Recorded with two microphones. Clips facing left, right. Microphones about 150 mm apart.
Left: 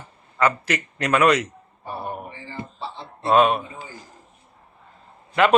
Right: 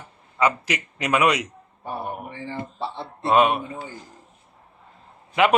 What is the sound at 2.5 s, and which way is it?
Speech, 65° right (ahead or behind).